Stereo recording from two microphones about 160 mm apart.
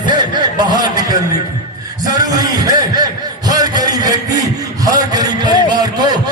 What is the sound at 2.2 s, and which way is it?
Speech, 25° right (ahead or behind).